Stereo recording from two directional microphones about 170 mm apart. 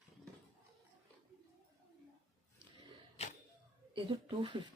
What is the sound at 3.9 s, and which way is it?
Speech, 30° right (ahead or behind).